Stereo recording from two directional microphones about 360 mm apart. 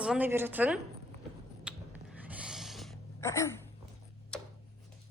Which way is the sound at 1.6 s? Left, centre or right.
Centre.